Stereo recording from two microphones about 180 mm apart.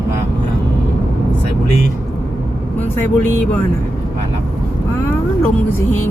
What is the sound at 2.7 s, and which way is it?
Vehicle, 10° left (ahead or behind).